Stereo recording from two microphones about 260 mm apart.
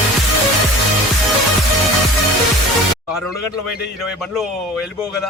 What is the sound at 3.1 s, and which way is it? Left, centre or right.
Speech, centre.